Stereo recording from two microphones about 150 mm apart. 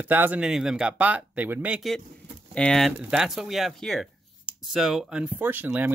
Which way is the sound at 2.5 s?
5° left (ahead or behind).